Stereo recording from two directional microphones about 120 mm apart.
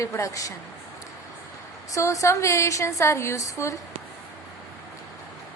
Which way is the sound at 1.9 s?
25° left (ahead or behind).